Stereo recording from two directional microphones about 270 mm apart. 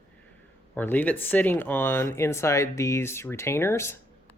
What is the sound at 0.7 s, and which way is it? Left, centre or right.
Speech, centre.